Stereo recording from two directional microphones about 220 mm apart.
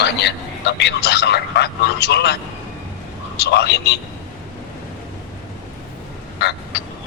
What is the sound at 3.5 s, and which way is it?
Speech, 50° left (ahead or behind).